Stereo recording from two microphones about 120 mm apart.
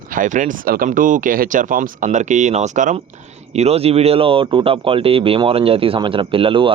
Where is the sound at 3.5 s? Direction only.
60° right (ahead or behind).